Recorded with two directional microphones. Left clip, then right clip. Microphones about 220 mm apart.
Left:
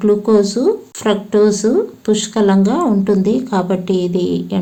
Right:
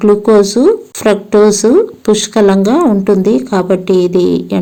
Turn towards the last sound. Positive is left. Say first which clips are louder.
# right 7 dB
turn(degrees=-25)  # may be behind; listen again after turning